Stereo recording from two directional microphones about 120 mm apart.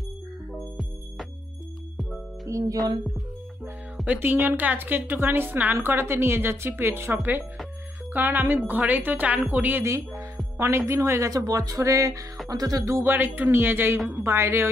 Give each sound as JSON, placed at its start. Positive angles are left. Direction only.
{"t": 0.5, "sound": "music", "side_deg": 0}
{"t": 2.4, "sound": "a woman's voice", "side_deg": -30}
{"t": 3.9, "sound": "music", "side_deg": -5}
{"t": 4.2, "sound": "a woman's voice", "side_deg": -15}